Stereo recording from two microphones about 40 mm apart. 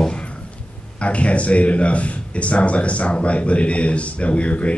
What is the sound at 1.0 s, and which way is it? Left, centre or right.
A man's voice, left.